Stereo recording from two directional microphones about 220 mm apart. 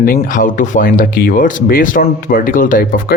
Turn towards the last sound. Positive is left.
turn(degrees=40)  # may be behind; listen again after turning